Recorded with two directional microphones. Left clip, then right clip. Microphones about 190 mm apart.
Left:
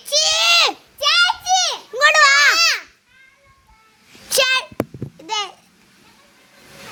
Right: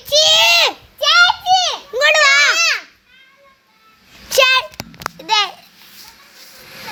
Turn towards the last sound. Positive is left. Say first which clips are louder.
# right 8 dB
turn(degrees=-5)  # may be behind; listen again after turning